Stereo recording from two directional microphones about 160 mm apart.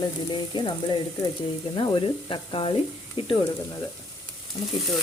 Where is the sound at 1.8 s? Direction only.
30° left (ahead or behind).